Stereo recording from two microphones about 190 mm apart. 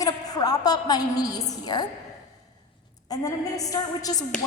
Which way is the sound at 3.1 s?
20° left (ahead or behind).